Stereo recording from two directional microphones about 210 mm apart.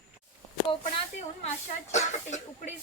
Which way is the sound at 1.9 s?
35° left (ahead or behind).